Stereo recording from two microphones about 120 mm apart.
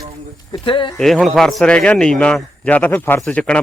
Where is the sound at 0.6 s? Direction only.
45° left (ahead or behind).